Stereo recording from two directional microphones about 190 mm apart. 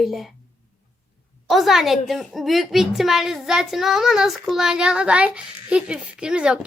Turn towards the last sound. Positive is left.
turn(degrees=-5)  # may be behind; listen again after turning